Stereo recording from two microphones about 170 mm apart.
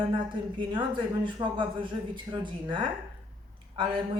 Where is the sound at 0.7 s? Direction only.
30° right (ahead or behind).